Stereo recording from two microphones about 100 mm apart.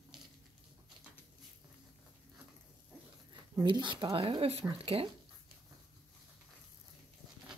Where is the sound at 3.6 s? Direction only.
55° right (ahead or behind); by 5.1 s 70° right (ahead or behind).